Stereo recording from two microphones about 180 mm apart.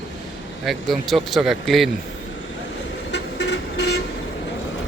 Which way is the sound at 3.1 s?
90° left.